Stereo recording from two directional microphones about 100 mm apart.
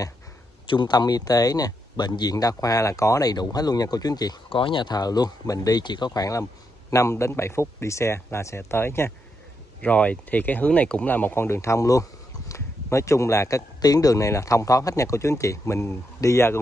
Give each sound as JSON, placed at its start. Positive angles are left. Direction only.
{"t": 0.7, "sound": "speech", "side_deg": 45}
{"t": 4.5, "sound": "speech", "side_deg": 60}
{"t": 9.8, "sound": "speech", "side_deg": 15}